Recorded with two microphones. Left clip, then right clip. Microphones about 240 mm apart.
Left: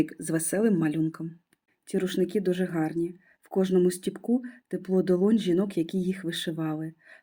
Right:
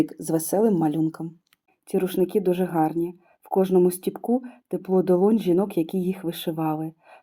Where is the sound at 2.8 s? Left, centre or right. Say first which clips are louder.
Right 7 dB; right.